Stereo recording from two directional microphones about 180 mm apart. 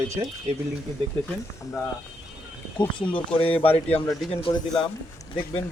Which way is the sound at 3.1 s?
30° left (ahead or behind).